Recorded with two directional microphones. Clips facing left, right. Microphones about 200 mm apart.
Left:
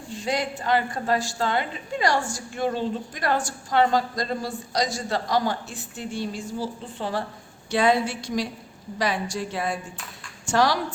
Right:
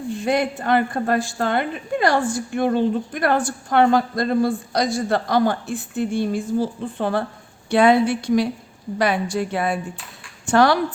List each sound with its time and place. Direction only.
0.1 s a woman's voice: 55° right (ahead or behind)